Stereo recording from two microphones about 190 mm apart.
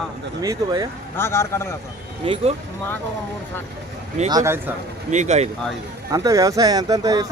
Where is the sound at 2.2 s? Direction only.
25° right (ahead or behind).